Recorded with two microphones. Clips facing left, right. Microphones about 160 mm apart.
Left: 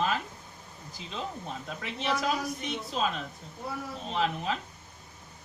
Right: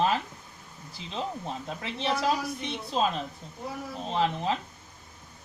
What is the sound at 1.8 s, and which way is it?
Speech, 30° right (ahead or behind).